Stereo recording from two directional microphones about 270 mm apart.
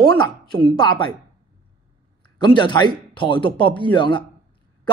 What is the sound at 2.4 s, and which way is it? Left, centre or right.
Speech, centre.